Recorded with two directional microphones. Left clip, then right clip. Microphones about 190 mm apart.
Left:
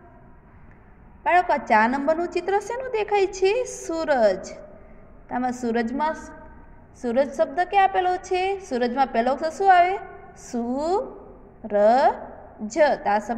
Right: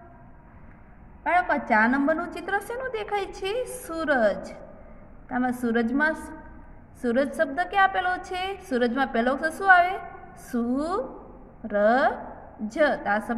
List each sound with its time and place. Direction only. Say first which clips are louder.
1.2 s a woman's voice: left 3 dB; 30° left (ahead or behind)